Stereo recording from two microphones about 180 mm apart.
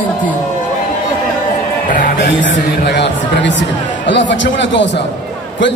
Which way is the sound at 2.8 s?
70° left (ahead or behind).